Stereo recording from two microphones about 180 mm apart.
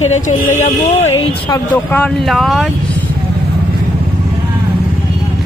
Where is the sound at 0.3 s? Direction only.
40° left (ahead or behind).